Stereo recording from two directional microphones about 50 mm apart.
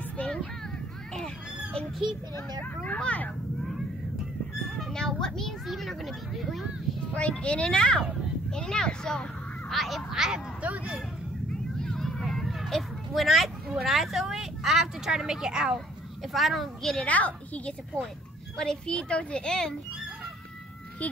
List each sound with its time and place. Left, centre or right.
0.2 s a sound: centre
2.6 s a child's voice: left
4.6 s a sound: centre
4.9 s a child's voice: centre
7.2 s a child's voice: left
9.7 s speech: centre
10.6 s speech: right
11.8 s vehicle: centre
13.7 s speech: centre
17.0 s a child's voice: left
17.9 s a child's voice: centre
21.0 s a child's voice: left